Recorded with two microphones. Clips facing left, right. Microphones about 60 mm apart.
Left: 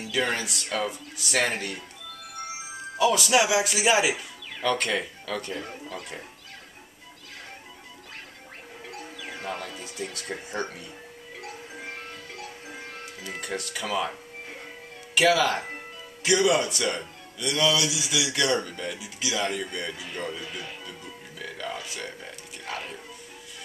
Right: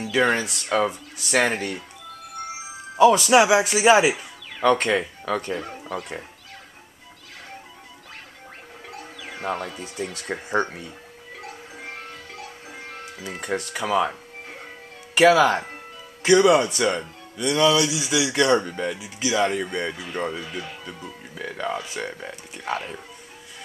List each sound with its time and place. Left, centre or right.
0.1 s speech: right
3.0 s speech: right
8.8 s music: centre
9.4 s speech: right
11.4 s music: centre
13.4 s speech: right
15.1 s speech: right
20.3 s speech: centre
21.4 s speech: right